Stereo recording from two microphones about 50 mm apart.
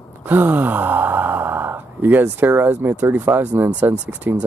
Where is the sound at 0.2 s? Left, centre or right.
Right.